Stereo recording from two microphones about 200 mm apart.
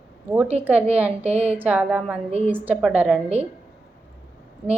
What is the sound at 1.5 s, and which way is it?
A woman's voice, 5° right (ahead or behind).